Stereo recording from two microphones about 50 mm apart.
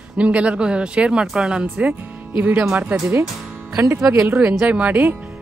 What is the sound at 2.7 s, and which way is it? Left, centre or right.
Speech, right.